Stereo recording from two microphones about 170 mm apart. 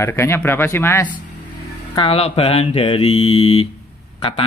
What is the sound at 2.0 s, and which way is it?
Speech, 35° left (ahead or behind).